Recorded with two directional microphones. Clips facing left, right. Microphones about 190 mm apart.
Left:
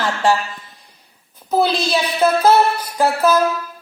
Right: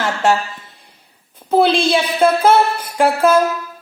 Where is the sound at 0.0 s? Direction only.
25° right (ahead or behind).